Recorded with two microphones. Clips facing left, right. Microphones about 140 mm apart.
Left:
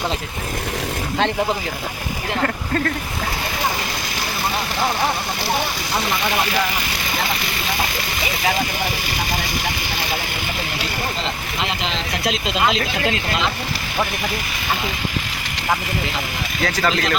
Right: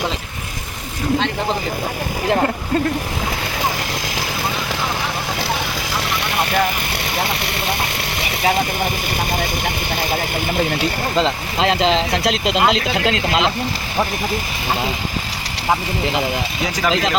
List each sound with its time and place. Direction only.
11.9 s speech: 90° right; by 13.4 s 75° right (ahead or behind)